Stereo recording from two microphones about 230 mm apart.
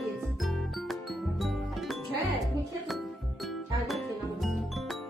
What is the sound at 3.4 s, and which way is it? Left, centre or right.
Music, centre.